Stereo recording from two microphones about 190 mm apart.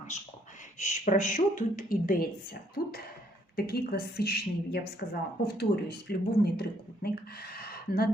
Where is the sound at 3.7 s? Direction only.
55° left (ahead or behind).